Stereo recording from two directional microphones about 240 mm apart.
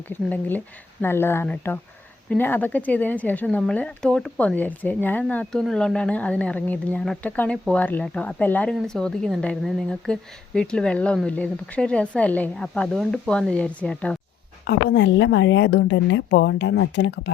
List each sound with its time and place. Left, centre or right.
0.1 s speech: centre
14.7 s a woman's voice: left